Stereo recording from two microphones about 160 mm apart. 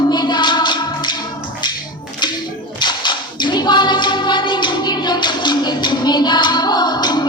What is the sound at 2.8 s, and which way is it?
Singing, 30° left (ahead or behind).